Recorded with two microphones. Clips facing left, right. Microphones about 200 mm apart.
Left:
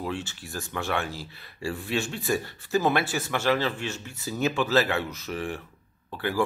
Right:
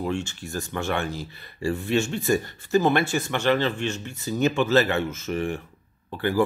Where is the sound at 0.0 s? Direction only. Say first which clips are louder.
Right 4 dB; centre (ahead or behind).